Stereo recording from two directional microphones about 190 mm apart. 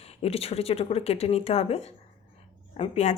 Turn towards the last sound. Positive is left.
turn(degrees=35)  # may be behind; listen again after turning